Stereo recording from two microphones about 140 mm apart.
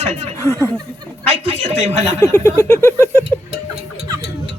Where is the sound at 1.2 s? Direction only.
50° right (ahead or behind).